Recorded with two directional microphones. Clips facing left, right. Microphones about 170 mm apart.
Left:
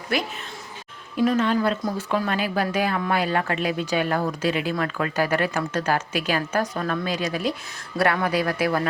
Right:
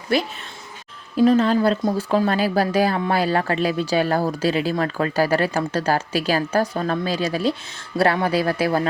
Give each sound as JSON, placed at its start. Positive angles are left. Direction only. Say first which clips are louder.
{"t": 0.1, "sound": "speech", "louder": "right 4 dB", "side_deg": -30}